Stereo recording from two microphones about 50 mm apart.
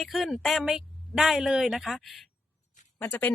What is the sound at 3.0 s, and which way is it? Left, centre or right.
Speech, left.